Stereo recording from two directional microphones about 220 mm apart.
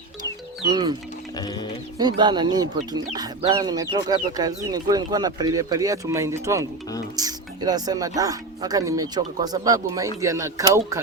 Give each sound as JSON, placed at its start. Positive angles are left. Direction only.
{"t": 0.7, "sound": "speech", "side_deg": -20}
{"t": 1.4, "sound": "music", "side_deg": 20}
{"t": 2.0, "sound": "speech", "side_deg": -20}